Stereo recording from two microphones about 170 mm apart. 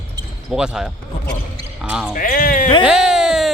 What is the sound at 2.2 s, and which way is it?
Speech, 50° left (ahead or behind).